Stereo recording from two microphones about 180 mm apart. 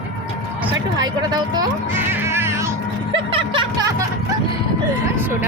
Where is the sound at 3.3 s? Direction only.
30° right (ahead or behind).